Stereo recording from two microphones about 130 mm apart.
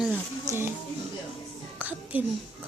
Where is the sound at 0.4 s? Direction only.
20° right (ahead or behind).